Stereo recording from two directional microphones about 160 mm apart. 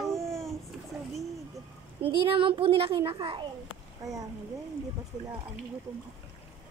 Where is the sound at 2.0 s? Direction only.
35° right (ahead or behind).